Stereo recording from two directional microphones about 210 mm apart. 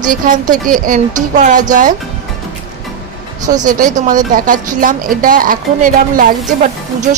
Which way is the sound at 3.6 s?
40° right (ahead or behind).